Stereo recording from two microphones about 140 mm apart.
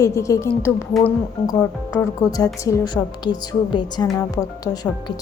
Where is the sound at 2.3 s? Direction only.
25° left (ahead or behind).